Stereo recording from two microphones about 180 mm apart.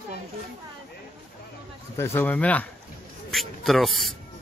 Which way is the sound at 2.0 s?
10° left (ahead or behind).